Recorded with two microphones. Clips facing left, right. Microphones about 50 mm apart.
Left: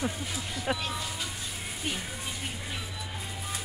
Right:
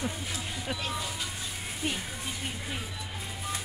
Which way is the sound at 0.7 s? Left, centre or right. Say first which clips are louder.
Left 6 dB; centre.